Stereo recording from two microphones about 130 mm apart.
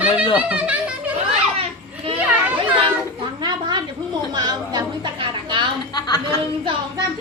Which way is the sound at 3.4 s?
35° right (ahead or behind).